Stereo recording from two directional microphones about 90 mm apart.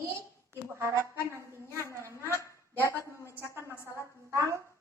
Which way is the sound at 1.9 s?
30° right (ahead or behind).